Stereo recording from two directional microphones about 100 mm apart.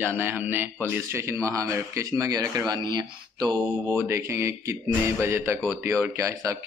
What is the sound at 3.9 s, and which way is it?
Speech, 25° right (ahead or behind).